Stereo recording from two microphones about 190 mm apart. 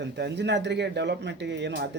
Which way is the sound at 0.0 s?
65° right (ahead or behind).